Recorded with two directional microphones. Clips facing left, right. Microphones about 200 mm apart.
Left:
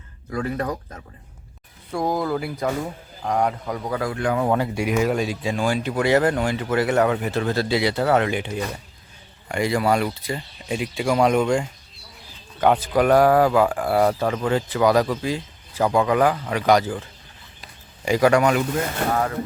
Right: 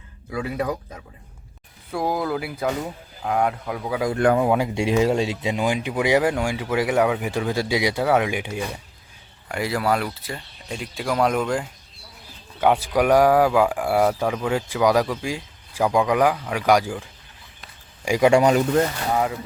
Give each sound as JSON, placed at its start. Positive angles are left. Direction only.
{"t": 0.3, "sound": "speech", "side_deg": -10}
{"t": 4.7, "sound": "speech", "side_deg": -25}
{"t": 18.3, "sound": "speech", "side_deg": -35}